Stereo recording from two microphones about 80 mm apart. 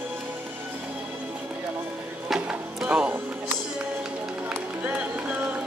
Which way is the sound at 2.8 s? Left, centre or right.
Centre.